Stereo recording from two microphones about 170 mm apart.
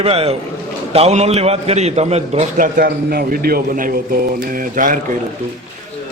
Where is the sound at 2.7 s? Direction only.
65° right (ahead or behind).